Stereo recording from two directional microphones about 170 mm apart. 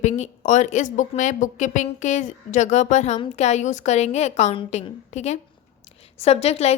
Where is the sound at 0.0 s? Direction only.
45° left (ahead or behind).